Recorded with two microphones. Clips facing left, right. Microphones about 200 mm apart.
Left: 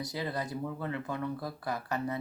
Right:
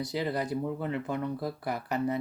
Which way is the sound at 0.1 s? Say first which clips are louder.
Right 5 dB; 20° right (ahead or behind).